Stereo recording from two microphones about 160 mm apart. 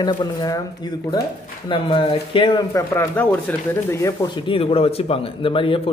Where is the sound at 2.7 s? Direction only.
20° left (ahead or behind).